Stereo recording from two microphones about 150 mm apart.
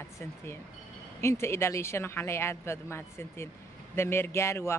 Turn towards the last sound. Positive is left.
turn(degrees=20)  # may be behind; listen again after turning